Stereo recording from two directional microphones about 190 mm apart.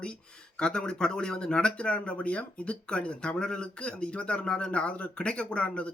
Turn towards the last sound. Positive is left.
turn(degrees=5)  # may be behind; listen again after turning